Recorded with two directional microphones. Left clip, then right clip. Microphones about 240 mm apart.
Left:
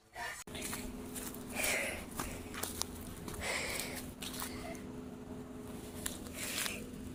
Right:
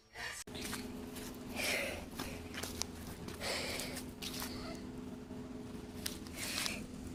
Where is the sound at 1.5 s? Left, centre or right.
Centre.